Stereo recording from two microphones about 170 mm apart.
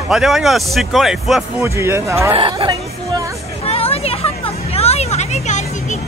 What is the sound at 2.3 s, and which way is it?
Speech, 30° right (ahead or behind).